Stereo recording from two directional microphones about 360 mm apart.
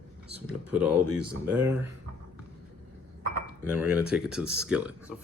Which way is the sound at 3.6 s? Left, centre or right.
Centre.